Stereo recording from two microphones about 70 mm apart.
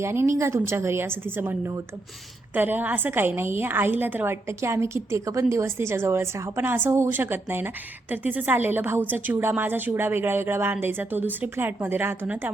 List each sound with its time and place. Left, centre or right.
0.0 s a woman's voice: right
4.4 s a woman's voice: right
6.6 s a woman's voice: right